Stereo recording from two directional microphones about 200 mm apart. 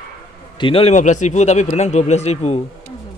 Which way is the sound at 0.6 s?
30° left (ahead or behind).